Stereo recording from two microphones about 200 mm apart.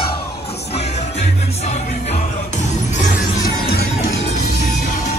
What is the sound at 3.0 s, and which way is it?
Music, 45° left (ahead or behind).